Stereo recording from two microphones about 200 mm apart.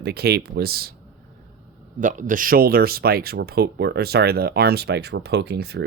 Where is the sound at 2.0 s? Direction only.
40° right (ahead or behind); by 5.8 s 55° right (ahead or behind).